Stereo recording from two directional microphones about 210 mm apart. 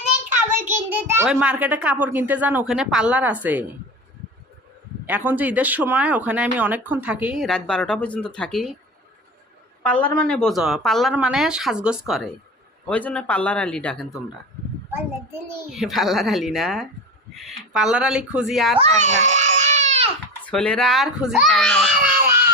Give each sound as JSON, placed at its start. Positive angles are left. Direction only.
{"t": 0.6, "sound": "speech", "side_deg": -10}
{"t": 5.0, "sound": "speech", "side_deg": -10}
{"t": 9.8, "sound": "speech", "side_deg": 5}
{"t": 14.9, "sound": "speech", "side_deg": -10}
{"t": 18.8, "sound": "baby cry", "side_deg": -35}
{"t": 20.4, "sound": "speech", "side_deg": 5}